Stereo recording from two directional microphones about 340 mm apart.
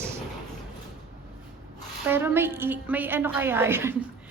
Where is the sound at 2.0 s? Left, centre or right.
Centre.